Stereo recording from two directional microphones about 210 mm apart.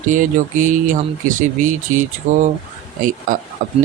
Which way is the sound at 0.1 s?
35° right (ahead or behind).